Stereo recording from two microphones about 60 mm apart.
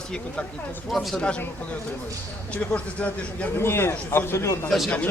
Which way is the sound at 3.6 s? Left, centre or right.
Left.